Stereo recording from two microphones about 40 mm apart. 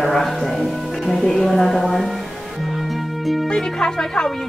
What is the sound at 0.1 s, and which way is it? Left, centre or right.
A woman's voice, centre.